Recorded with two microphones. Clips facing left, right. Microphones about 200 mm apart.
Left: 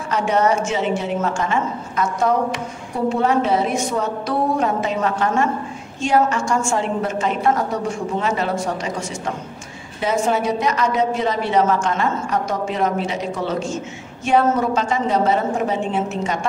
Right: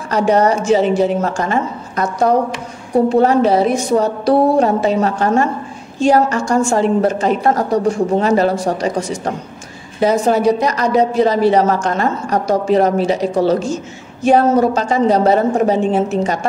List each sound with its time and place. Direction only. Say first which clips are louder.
0.1 s a woman's voice: right 5 dB; 35° right (ahead or behind)